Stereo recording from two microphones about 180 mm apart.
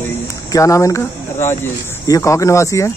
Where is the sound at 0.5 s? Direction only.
15° left (ahead or behind).